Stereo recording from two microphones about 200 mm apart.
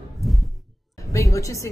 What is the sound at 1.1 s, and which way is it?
Speech, 15° left (ahead or behind).